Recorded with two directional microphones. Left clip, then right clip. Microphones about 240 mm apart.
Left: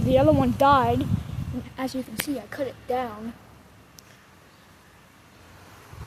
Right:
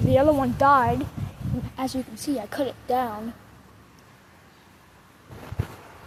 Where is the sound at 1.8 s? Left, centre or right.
Centre.